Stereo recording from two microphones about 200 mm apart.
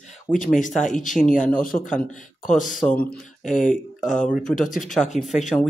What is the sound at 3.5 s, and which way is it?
Speech, 40° left (ahead or behind).